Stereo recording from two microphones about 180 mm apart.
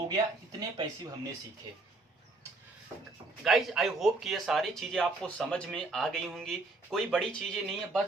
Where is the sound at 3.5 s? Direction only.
Centre (ahead or behind).